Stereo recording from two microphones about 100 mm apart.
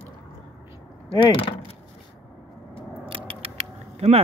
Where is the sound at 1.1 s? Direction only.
60° left (ahead or behind).